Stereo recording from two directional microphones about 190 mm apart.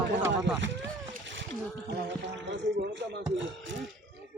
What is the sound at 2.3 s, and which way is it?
Speech, 70° right (ahead or behind).